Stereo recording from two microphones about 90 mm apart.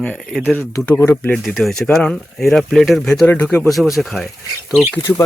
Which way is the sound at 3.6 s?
Centre (ahead or behind).